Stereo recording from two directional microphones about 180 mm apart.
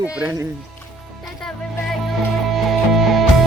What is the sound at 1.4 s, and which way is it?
Music, 5° left (ahead or behind).